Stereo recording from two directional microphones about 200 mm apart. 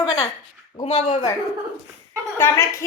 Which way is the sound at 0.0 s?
20° left (ahead or behind).